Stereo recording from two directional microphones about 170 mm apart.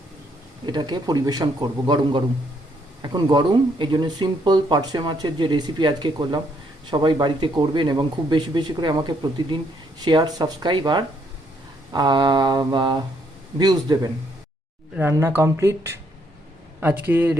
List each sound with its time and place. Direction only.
0.6 s speech: 25° right (ahead or behind)
14.9 s speech: 10° right (ahead or behind)